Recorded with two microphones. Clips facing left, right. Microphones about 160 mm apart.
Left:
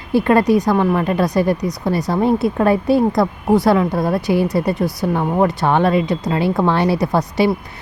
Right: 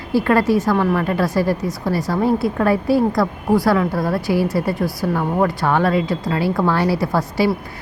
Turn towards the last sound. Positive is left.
turn(degrees=20)  # may be behind; listen again after turning